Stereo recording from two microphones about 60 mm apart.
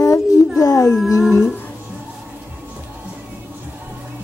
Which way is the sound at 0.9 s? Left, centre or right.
Centre.